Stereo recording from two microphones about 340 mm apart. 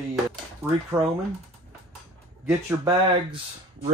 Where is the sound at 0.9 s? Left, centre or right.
Centre.